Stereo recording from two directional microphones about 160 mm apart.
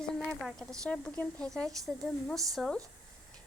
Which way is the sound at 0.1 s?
5° left (ahead or behind).